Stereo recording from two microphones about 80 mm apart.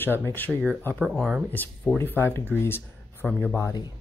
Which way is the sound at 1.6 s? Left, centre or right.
Left.